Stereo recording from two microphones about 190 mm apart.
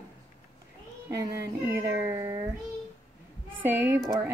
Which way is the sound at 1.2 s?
10° right (ahead or behind).